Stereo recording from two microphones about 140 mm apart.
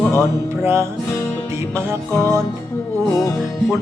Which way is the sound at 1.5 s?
20° right (ahead or behind).